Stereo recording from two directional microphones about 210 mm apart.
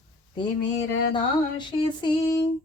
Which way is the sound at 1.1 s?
20° left (ahead or behind).